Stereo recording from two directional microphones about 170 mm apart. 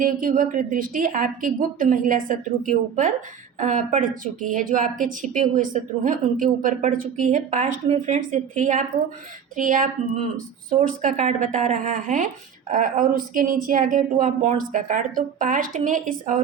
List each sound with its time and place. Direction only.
0.0 s speech: 55° right (ahead or behind)